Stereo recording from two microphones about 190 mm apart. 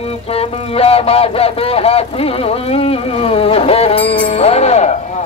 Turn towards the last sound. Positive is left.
turn(degrees=35)  # may be behind; listen again after turning